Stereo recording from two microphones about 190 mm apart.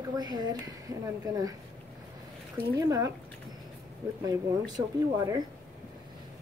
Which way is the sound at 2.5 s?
15° right (ahead or behind).